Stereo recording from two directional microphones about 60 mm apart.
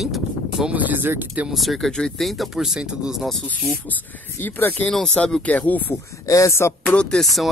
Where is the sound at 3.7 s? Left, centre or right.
Left.